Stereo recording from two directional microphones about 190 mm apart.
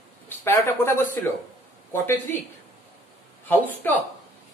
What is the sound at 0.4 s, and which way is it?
Speech, 10° left (ahead or behind).